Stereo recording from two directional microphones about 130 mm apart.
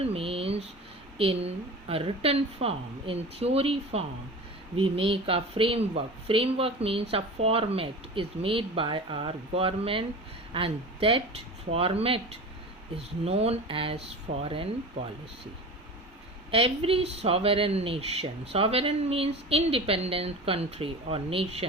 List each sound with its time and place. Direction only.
0.0 s a sound: 50° right (ahead or behind)
1.2 s speech: 50° right (ahead or behind)
16.5 s speech: 45° right (ahead or behind)